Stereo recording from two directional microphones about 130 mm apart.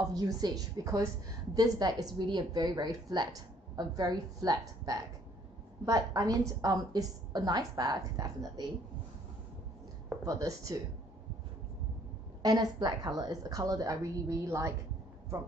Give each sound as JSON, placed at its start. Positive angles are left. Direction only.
{"t": 0.1, "sound": "a woman's voice", "side_deg": -30}
{"t": 10.2, "sound": "a woman's voice", "side_deg": -25}
{"t": 12.4, "sound": "a woman's voice", "side_deg": -30}